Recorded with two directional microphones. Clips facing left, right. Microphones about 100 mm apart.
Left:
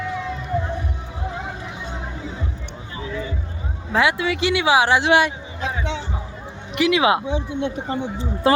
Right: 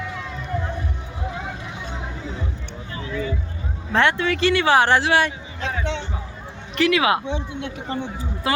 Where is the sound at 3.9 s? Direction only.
5° left (ahead or behind).